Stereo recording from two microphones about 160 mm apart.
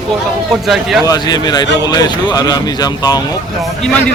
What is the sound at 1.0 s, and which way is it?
Speech, 25° left (ahead or behind).